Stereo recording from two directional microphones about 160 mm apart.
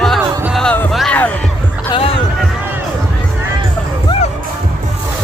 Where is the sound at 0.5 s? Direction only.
10° left (ahead or behind).